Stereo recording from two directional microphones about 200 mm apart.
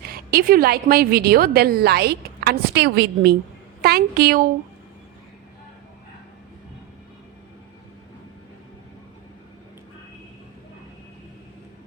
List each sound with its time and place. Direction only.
0.0 s a woman's voice: 50° right (ahead or behind)